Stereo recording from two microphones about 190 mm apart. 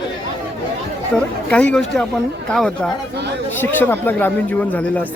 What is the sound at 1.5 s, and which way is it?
Speech, 5° left (ahead or behind).